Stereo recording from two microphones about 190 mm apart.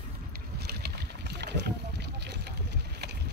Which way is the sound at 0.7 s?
60° right (ahead or behind).